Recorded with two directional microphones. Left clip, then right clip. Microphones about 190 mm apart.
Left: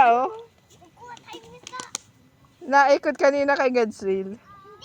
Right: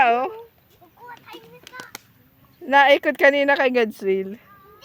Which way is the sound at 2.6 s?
25° right (ahead or behind).